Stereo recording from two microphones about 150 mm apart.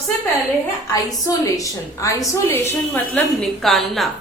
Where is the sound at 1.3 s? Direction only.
20° left (ahead or behind).